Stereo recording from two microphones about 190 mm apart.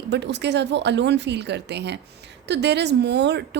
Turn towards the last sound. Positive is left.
turn(degrees=-65)  # may be behind; listen again after turning